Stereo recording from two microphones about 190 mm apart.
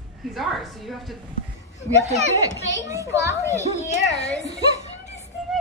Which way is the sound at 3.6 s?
35° left (ahead or behind).